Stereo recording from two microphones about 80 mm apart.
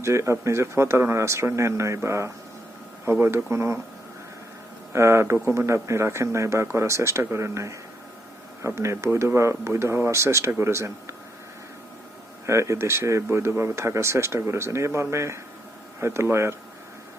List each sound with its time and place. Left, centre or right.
0.0 s speech: right
4.9 s speech: right
12.5 s speech: right